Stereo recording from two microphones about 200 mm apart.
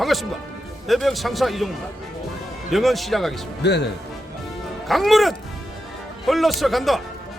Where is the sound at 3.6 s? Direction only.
60° left (ahead or behind).